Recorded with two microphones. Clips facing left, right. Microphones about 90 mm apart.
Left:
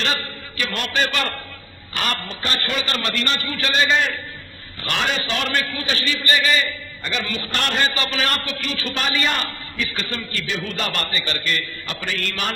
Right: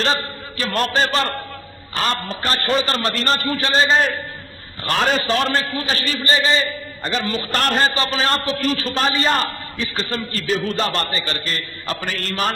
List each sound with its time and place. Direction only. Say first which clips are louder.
0.0 s a man's voice: right 4 dB; 35° right (ahead or behind)